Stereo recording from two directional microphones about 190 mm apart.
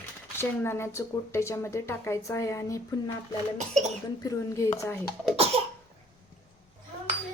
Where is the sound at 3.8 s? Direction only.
40° right (ahead or behind).